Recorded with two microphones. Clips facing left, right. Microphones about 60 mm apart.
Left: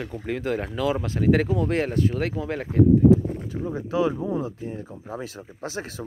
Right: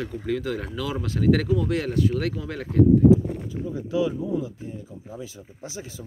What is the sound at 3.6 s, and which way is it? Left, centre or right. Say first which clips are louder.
Speech: left 1 dB; left.